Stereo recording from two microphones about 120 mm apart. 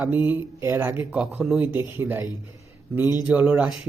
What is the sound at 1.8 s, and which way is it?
Speech, 25° right (ahead or behind).